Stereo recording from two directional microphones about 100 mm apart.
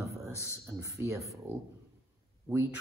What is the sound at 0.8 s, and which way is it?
Speech, 30° right (ahead or behind).